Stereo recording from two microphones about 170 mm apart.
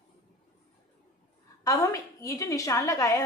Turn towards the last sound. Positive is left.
turn(degrees=20)  # may be behind; listen again after turning